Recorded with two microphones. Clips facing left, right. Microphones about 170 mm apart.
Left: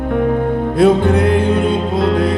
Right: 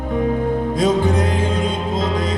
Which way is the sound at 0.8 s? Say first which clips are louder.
Left 7 dB; 60° left (ahead or behind).